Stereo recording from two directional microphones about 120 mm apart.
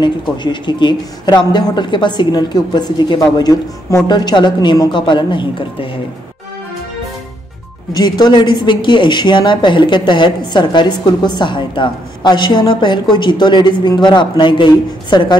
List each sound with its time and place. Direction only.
0.0 s speech: 40° left (ahead or behind)
7.9 s speech: 35° left (ahead or behind)